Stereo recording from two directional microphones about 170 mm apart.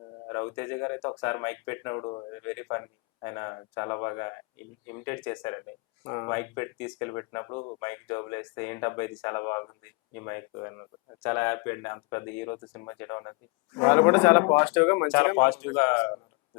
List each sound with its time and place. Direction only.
0.3 s speech: 15° left (ahead or behind)
7.8 s speech: 15° left (ahead or behind)